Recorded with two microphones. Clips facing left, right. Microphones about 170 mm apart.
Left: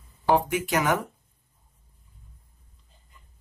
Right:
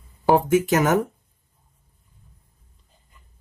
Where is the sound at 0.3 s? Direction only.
45° right (ahead or behind).